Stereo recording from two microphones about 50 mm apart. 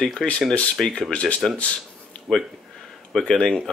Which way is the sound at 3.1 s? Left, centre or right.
Centre.